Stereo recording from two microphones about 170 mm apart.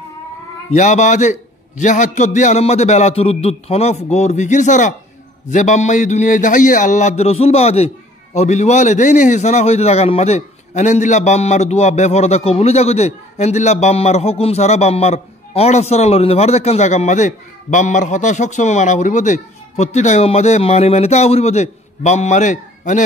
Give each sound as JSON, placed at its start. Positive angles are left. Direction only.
{"t": 0.7, "sound": "a man's voice", "side_deg": 45}